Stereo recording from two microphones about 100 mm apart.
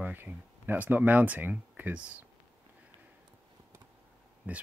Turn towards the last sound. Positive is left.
turn(degrees=-15)  # may be behind; listen again after turning